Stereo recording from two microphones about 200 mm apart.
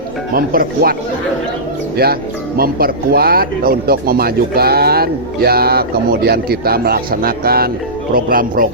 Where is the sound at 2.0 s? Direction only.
50° right (ahead or behind).